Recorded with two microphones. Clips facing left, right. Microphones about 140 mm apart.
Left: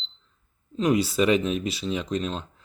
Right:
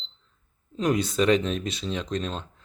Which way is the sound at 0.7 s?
Centre (ahead or behind).